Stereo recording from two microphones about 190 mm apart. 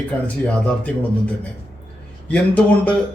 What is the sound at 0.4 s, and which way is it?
Speech, 5° left (ahead or behind).